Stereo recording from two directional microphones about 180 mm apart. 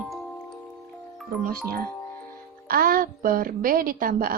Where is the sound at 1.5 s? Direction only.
55° right (ahead or behind).